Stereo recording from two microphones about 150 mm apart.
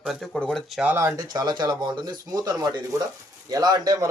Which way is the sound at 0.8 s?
15° right (ahead or behind).